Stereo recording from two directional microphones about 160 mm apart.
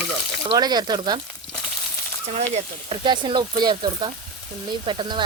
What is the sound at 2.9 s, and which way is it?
Speech, 30° right (ahead or behind).